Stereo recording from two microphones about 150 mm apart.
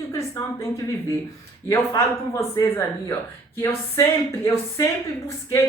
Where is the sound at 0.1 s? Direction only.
20° left (ahead or behind).